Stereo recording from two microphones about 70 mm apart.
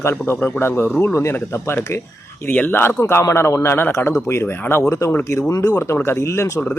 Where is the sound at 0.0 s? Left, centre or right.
Left.